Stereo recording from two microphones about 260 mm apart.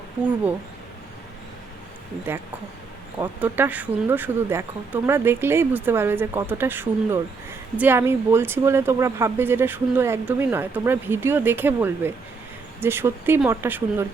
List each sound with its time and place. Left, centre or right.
0.2 s speech: centre
3.2 s speech: centre